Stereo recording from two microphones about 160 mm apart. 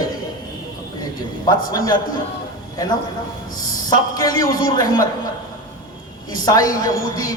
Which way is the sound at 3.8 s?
25° left (ahead or behind).